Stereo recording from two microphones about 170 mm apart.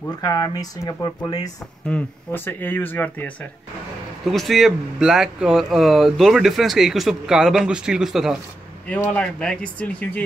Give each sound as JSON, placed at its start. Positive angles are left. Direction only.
{"t": 0.2, "sound": "speech", "side_deg": 20}
{"t": 1.9, "sound": "speech", "side_deg": 10}